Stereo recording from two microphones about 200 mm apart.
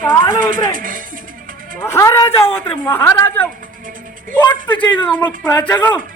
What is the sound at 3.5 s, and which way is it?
Music, 40° right (ahead or behind).